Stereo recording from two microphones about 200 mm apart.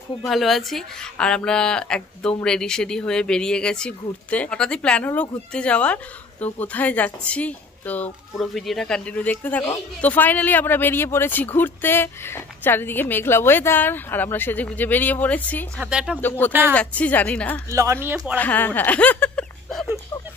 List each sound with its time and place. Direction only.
0.3 s a woman's voice: centre (ahead or behind)
15.8 s speech: 5° right (ahead or behind)
16.2 s a woman's voice: 10° left (ahead or behind)
17.6 s speech: 15° right (ahead or behind)
18.4 s a woman's voice: 10° left (ahead or behind)